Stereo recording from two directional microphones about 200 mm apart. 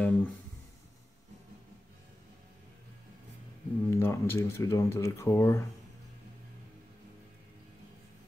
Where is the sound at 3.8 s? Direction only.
15° left (ahead or behind).